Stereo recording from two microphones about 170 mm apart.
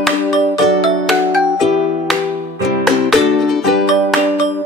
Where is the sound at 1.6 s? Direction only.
Centre (ahead or behind).